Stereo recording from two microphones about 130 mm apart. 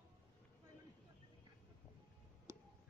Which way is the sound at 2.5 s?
20° right (ahead or behind).